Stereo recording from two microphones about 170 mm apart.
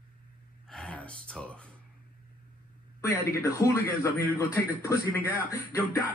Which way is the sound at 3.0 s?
20° left (ahead or behind).